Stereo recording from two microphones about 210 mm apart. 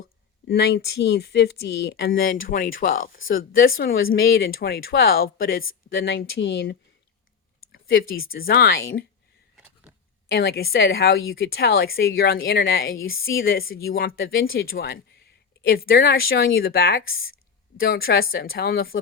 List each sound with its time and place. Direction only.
0.4 s speech: 50° left (ahead or behind)
5.6 s speech: 65° left (ahead or behind)
8.3 s speech: 45° left (ahead or behind)
10.3 s speech: 50° left (ahead or behind); by 13.4 s 70° left (ahead or behind)
13.4 s speech: 45° left (ahead or behind)